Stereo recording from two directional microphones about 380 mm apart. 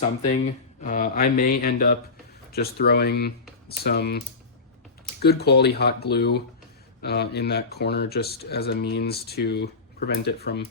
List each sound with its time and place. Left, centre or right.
0.3 s speech: centre
5.2 s speech: left